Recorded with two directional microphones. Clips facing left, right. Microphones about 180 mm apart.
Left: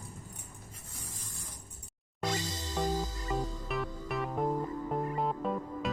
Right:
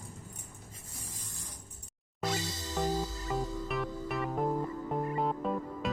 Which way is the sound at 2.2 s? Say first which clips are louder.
Even; 10° right (ahead or behind).